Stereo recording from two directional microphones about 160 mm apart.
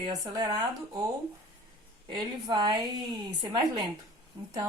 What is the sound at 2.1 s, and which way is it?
Speech, 30° right (ahead or behind).